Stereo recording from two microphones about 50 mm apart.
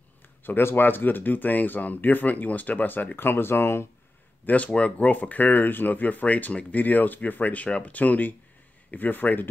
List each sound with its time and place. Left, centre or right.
0.4 s speech: left
4.5 s speech: left